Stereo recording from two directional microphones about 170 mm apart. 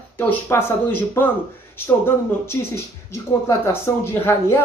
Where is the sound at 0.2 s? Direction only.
15° left (ahead or behind).